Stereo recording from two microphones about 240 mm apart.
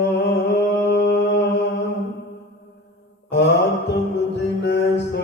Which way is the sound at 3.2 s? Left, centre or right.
Left.